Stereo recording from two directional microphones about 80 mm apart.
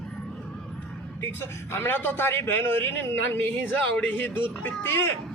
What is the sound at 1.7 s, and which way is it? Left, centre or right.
A man's voice, left.